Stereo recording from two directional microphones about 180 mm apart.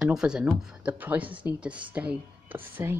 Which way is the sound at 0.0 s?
5° right (ahead or behind).